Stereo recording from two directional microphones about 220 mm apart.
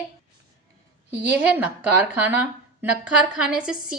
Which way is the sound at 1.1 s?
10° right (ahead or behind).